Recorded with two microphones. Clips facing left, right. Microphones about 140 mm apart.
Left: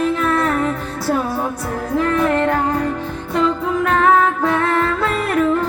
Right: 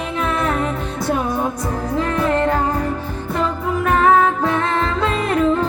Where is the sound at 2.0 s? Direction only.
15° right (ahead or behind).